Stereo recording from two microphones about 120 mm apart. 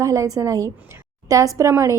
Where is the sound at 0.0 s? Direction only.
30° right (ahead or behind).